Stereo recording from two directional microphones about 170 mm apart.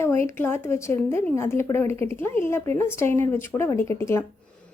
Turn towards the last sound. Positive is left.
turn(degrees=15)  # may be behind; listen again after turning